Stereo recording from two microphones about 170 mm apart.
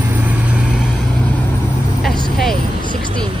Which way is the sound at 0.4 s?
5° right (ahead or behind).